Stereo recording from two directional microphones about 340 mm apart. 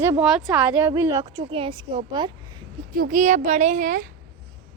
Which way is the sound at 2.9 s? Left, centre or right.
Right.